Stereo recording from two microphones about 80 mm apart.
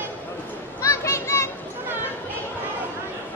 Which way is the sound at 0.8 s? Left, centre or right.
Left.